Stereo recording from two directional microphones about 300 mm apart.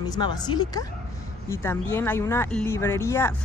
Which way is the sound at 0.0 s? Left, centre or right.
Centre.